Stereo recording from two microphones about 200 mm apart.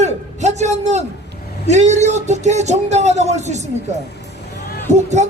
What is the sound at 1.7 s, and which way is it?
Music, 35° right (ahead or behind).